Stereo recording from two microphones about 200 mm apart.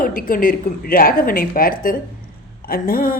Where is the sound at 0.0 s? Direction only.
45° left (ahead or behind).